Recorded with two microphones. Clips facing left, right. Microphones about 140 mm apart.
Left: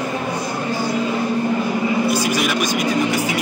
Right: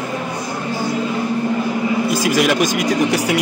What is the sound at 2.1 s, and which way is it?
Speech, 90° right.